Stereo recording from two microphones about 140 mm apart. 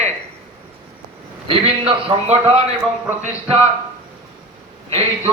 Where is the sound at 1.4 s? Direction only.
40° right (ahead or behind).